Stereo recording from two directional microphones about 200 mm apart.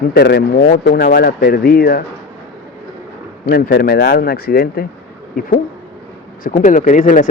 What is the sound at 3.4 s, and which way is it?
Speech, 50° left (ahead or behind).